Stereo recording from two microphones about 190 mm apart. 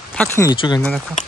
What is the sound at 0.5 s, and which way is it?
Speech, 25° left (ahead or behind).